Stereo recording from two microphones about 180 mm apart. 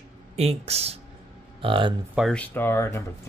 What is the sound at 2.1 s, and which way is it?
Speech, centre (ahead or behind).